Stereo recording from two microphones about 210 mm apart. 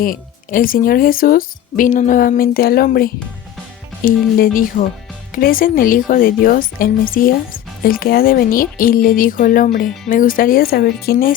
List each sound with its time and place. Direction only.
0.0 s speech: 40° left (ahead or behind)